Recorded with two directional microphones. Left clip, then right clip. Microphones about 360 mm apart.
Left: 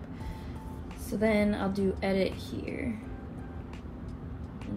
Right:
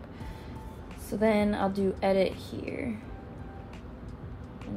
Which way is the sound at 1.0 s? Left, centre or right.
Centre.